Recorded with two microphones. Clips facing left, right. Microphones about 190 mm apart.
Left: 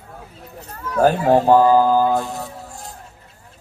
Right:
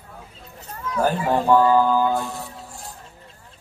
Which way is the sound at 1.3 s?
45° left (ahead or behind).